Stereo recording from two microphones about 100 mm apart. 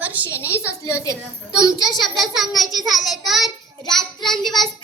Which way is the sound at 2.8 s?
Centre (ahead or behind).